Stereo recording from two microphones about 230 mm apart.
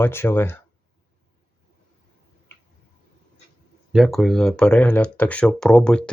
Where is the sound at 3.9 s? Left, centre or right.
Centre.